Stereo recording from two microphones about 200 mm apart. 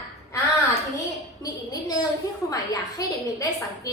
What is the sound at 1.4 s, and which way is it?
A child's voice, 20° left (ahead or behind).